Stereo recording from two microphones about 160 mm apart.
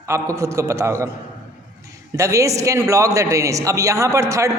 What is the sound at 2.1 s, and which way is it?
A man's voice, 20° right (ahead or behind).